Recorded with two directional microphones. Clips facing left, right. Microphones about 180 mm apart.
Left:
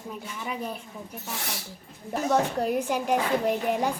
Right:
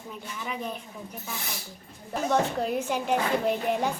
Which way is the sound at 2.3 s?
10° left (ahead or behind).